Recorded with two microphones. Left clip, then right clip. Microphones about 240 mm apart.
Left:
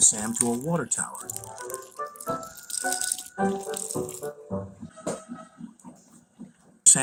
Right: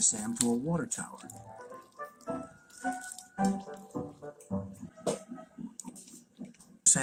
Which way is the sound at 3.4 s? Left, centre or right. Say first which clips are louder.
Left 6 dB; left.